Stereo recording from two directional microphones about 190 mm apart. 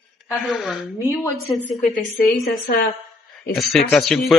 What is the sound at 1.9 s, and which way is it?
Speech, 55° left (ahead or behind).